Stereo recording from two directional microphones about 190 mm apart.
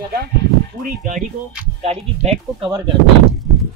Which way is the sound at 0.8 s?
40° right (ahead or behind).